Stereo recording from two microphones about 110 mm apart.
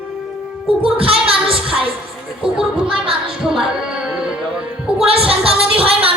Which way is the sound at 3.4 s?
5° right (ahead or behind).